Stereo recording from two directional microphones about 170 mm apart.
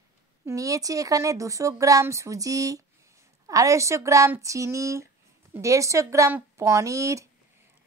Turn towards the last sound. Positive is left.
turn(degrees=-20)  # may be behind; listen again after turning